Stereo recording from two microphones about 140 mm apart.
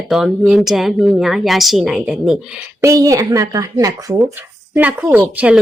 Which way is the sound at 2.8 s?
25° right (ahead or behind).